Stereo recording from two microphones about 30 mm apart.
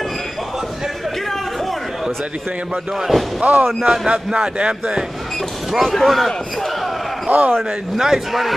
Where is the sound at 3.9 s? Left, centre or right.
Right.